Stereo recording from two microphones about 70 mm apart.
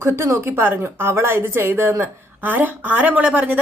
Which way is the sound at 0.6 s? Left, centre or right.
Right.